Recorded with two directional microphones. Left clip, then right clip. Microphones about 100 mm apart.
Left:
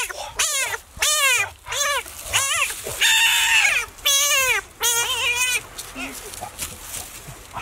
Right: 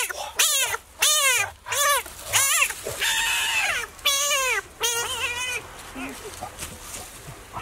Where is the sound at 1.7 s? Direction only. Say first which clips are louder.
Right 4 dB; 15° right (ahead or behind).